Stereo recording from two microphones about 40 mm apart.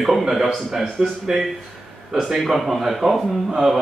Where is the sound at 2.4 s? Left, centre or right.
Centre.